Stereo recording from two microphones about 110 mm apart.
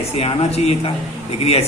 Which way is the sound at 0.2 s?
60° left (ahead or behind).